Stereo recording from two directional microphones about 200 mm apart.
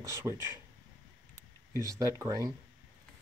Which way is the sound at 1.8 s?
15° right (ahead or behind).